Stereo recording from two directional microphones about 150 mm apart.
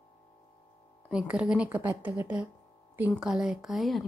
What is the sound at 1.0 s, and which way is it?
A woman's voice, 5° right (ahead or behind).